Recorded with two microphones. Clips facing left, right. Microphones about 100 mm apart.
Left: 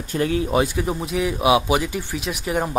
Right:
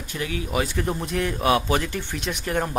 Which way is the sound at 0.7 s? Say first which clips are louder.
Left 2 dB; 5° left (ahead or behind).